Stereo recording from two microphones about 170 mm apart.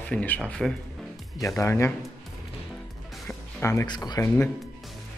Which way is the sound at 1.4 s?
15° left (ahead or behind).